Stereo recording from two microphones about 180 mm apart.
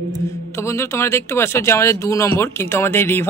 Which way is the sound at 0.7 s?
15° left (ahead or behind).